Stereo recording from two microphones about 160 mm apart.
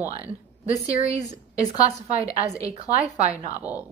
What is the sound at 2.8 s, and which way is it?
Speech, 45° right (ahead or behind).